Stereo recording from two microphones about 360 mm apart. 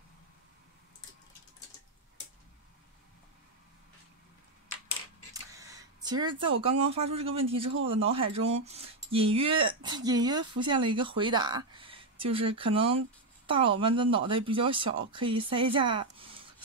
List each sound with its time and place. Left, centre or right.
5.3 s a woman's voice: centre